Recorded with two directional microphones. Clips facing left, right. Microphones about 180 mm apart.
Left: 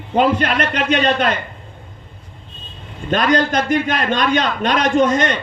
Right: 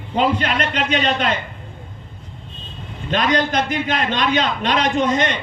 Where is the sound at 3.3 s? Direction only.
50° left (ahead or behind).